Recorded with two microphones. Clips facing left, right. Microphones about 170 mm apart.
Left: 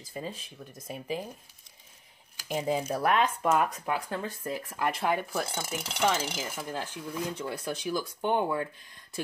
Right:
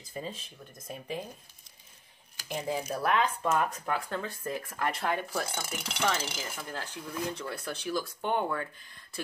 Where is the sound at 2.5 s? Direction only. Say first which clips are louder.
Left 4 dB; 15° left (ahead or behind).